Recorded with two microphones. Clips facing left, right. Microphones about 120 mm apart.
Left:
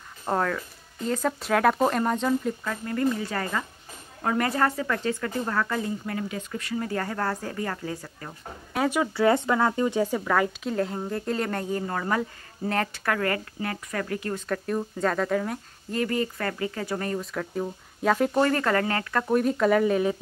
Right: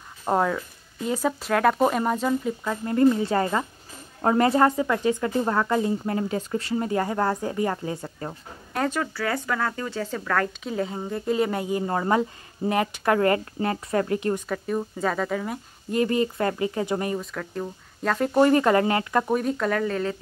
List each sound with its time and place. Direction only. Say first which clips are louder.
0.2 s speech: right 3 dB; 15° right (ahead or behind)
2.6 s speech: right 6 dB; 20° right (ahead or behind)
8.7 s speech: left 1 dB; 10° left (ahead or behind)
9.1 s speech: left 6 dB; 25° left (ahead or behind)
10.7 s speech: even; centre (ahead or behind)
11.8 s speech: right 4 dB; 25° right (ahead or behind)
14.5 s speech: right 1 dB; 5° right (ahead or behind)
15.9 s speech: right 4 dB; 20° right (ahead or behind)
17.2 s speech: left 1 dB; centre (ahead or behind)
18.3 s speech: right 5 dB; 15° right (ahead or behind)
19.3 s speech: left 3 dB; centre (ahead or behind)